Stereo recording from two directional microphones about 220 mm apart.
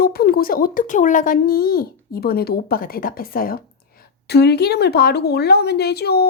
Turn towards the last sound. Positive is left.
turn(degrees=45)  # may be behind; listen again after turning